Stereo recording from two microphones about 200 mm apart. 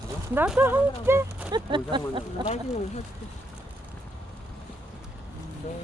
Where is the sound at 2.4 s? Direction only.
35° left (ahead or behind).